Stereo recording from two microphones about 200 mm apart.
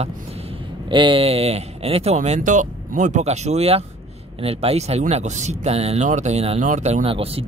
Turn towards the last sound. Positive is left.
turn(degrees=-30)  # may be behind; listen again after turning